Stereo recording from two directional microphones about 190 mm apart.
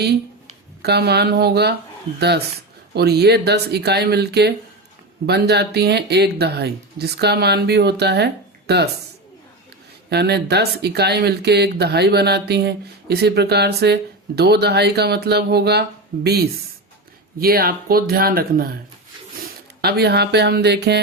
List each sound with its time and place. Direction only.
0.8 s speech: 60° right (ahead or behind)
2.9 s speech: 60° right (ahead or behind)
10.1 s speech: 60° right (ahead or behind)